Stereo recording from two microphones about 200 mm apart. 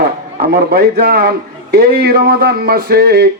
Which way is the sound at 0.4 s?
50° right (ahead or behind).